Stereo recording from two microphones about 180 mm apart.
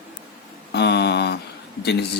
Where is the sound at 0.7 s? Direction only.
70° left (ahead or behind).